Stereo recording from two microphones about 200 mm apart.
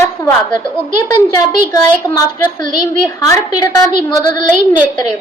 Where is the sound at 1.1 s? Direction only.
20° left (ahead or behind).